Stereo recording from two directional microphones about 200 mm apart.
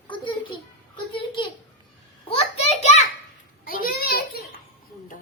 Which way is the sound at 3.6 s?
50° left (ahead or behind).